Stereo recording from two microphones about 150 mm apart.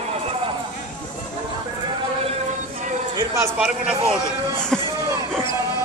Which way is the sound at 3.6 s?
5° right (ahead or behind).